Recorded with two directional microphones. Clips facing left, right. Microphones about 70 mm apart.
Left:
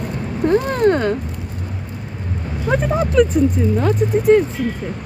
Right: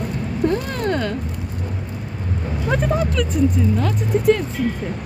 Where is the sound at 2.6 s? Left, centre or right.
Centre.